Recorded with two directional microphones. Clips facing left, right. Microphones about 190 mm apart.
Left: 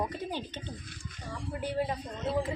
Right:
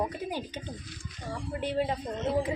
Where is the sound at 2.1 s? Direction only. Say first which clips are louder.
Right 2 dB; 20° right (ahead or behind).